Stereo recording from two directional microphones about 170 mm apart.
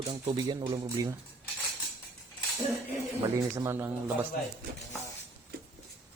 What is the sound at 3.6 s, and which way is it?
Speech, 15° right (ahead or behind).